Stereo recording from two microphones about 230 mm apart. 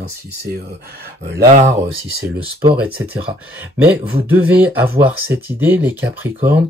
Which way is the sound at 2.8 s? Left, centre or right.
Centre.